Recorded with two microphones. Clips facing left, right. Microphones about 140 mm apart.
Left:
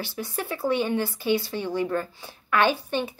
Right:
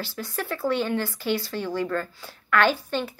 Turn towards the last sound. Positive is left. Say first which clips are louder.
# even
turn(degrees=15)  # may be behind; listen again after turning